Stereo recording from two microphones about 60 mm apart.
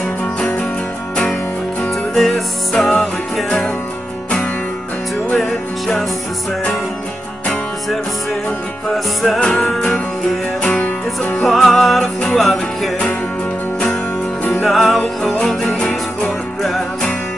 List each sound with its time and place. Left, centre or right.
0.4 s music: centre
2.1 s music: centre
8.8 s music: centre
10.6 s music: centre
11.4 s music: centre
14.6 s music: centre